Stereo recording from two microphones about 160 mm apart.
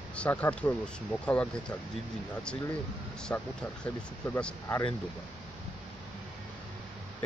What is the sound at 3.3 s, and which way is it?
Speech, 15° left (ahead or behind).